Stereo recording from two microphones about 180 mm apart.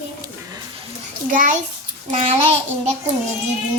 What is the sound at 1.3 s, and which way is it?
Speech, 45° right (ahead or behind).